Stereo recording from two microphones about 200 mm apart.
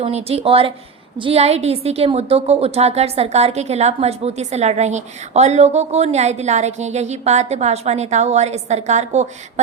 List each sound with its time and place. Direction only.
0.0 s a woman's voice: 30° right (ahead or behind)